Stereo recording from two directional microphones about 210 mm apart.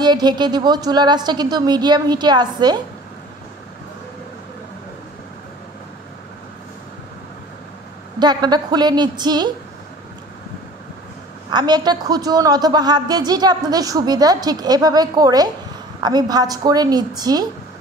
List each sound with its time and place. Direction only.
0.0 s a woman's voice: 20° right (ahead or behind)
8.2 s a woman's voice: 20° right (ahead or behind)
11.5 s a woman's voice: 20° right (ahead or behind)